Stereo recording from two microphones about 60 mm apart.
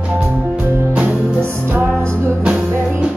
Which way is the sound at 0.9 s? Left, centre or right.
Centre.